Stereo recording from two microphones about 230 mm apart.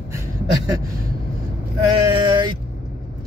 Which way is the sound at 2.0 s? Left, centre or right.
Centre.